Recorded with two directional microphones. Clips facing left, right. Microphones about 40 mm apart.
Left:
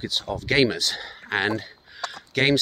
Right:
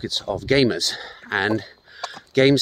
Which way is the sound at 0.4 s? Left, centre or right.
Left.